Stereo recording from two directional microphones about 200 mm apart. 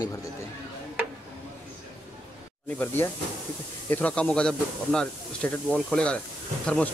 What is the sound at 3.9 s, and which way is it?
Speech, 5° left (ahead or behind).